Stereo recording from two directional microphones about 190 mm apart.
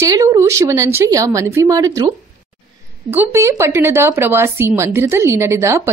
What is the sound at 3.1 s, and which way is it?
A woman's voice, 10° right (ahead or behind).